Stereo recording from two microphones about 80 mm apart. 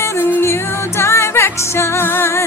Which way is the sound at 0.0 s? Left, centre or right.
Left.